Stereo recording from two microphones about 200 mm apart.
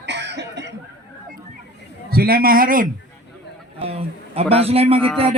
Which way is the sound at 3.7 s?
30° right (ahead or behind).